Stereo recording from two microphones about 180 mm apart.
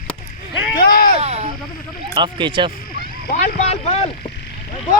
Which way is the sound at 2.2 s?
25° right (ahead or behind).